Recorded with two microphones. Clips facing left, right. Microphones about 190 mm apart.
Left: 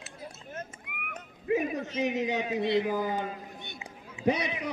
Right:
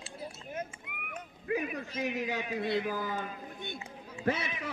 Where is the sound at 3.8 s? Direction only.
15° left (ahead or behind).